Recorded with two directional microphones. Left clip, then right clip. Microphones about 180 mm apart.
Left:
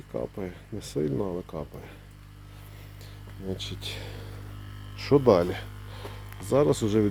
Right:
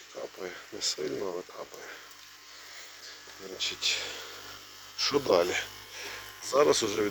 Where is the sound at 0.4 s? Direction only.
10° left (ahead or behind).